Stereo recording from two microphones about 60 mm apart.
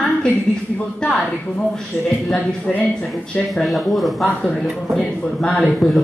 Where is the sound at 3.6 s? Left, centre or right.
Centre.